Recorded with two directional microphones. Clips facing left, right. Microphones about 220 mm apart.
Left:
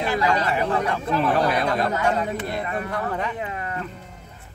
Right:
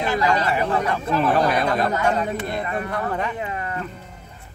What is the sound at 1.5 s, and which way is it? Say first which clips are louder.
Speech: right 1 dB; 45° right (ahead or behind).